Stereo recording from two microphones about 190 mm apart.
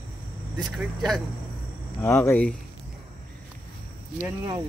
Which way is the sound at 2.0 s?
15° left (ahead or behind).